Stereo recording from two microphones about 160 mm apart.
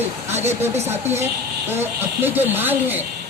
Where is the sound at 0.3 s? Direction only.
45° right (ahead or behind).